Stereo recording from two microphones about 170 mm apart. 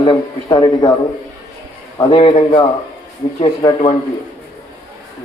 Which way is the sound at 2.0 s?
30° left (ahead or behind).